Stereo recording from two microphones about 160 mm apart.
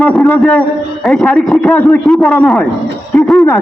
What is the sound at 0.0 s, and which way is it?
A man's voice, 10° left (ahead or behind).